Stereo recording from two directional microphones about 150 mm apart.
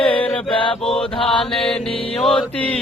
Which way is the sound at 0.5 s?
35° left (ahead or behind).